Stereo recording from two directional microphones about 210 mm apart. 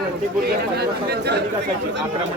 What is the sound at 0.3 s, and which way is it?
Speech, 50° right (ahead or behind).